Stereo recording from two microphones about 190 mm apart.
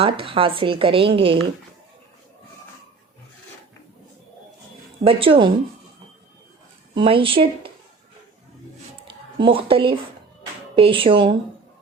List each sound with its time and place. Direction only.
0.0 s a woman's voice: 30° right (ahead or behind)
5.0 s a woman's voice: 30° right (ahead or behind)
6.9 s a woman's voice: 30° right (ahead or behind)
9.4 s a woman's voice: 30° right (ahead or behind)